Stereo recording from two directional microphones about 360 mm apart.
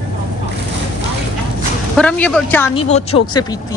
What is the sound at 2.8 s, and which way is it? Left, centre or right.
Speech, centre.